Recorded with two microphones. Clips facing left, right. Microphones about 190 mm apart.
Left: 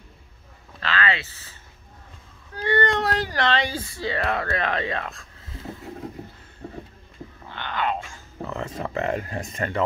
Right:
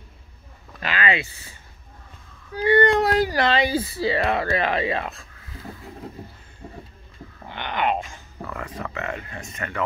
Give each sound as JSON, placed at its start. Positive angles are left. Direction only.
{"t": 0.7, "sound": "a sound", "side_deg": -15}
{"t": 2.5, "sound": "speech", "side_deg": -10}
{"t": 7.4, "sound": "speech", "side_deg": -15}
{"t": 8.4, "sound": "speech", "side_deg": 25}